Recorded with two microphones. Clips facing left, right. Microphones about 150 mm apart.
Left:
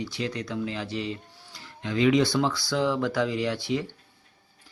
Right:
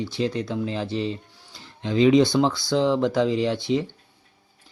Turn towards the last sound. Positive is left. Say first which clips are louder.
# right 5 dB
turn(degrees=-25)  # may be behind; listen again after turning